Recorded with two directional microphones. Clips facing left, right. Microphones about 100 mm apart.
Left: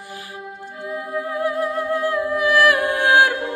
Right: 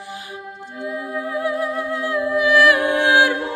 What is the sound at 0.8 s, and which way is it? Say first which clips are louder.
Humming: even; 45° left (ahead or behind).